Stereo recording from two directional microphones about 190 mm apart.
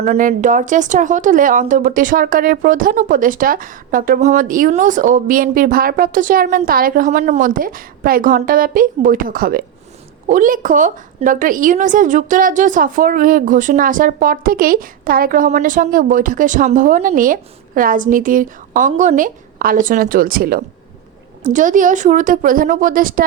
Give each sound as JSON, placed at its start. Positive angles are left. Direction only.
{"t": 0.0, "sound": "a woman's voice", "side_deg": -40}